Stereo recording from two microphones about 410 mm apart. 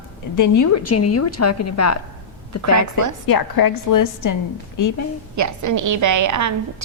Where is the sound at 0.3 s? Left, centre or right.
Left.